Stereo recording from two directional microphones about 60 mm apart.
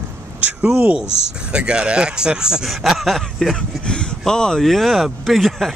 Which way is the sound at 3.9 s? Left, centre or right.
Centre.